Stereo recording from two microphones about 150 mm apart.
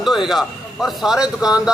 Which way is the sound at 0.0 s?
Centre (ahead or behind).